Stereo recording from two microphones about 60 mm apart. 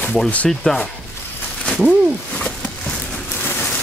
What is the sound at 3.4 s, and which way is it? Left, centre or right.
Rain, left.